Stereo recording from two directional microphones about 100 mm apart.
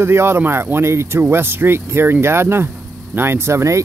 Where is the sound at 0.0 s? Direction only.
25° right (ahead or behind).